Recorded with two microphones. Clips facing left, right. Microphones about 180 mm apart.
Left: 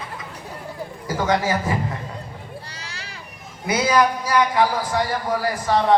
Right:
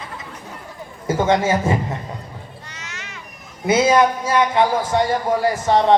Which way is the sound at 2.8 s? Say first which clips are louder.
Right 1 dB; 35° left (ahead or behind).